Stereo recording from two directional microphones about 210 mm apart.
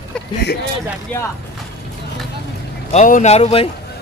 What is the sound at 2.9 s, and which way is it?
Speech, 35° left (ahead or behind).